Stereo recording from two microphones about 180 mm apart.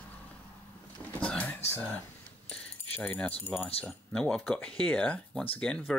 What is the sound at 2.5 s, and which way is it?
Keys jangling, 5° left (ahead or behind).